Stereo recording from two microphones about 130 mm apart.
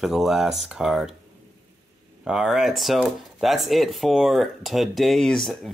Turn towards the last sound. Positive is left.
turn(degrees=5)  # may be behind; listen again after turning